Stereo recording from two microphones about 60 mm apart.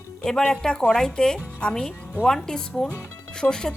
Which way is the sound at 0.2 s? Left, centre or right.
Centre.